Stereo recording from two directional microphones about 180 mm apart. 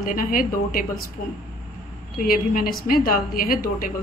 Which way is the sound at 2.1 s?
50° left (ahead or behind).